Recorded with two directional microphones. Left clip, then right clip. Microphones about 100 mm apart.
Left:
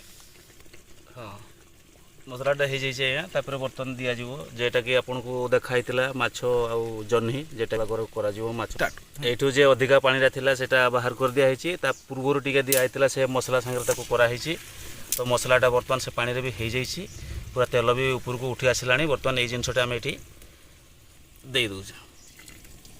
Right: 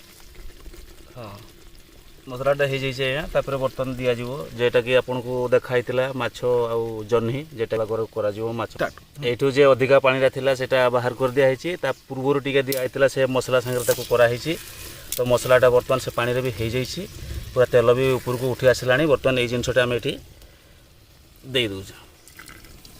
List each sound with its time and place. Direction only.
1.1 s speech: 30° right (ahead or behind)
2.3 s speech: 50° right (ahead or behind)
5.0 s speech: 30° right (ahead or behind)
5.4 s speech: 10° right (ahead or behind)
14.1 s speech: 40° right (ahead or behind)
15.4 s speech: 65° right (ahead or behind)
15.9 s speech: 85° right; by 18.2 s 65° right (ahead or behind)
18.4 s speech: 85° right
21.5 s speech: 50° right (ahead or behind)